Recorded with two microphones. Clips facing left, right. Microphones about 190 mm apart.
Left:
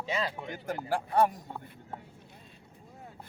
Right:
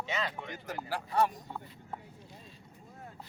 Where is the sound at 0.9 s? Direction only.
55° left (ahead or behind).